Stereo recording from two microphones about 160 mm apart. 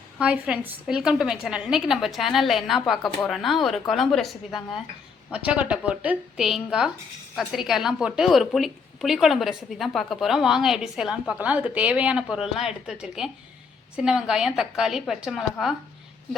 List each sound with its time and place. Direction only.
0.2 s a woman's voice: 5° right (ahead or behind)